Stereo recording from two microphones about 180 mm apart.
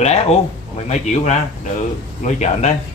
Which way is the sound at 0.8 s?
40° left (ahead or behind).